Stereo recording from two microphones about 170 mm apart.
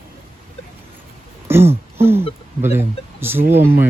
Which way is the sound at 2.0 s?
15° right (ahead or behind).